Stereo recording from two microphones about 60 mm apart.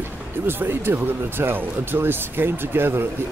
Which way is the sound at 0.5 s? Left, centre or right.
Right.